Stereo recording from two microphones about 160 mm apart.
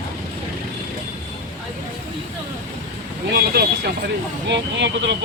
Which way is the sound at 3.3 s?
75° right (ahead or behind).